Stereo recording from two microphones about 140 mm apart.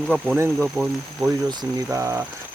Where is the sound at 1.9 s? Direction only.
20° right (ahead or behind).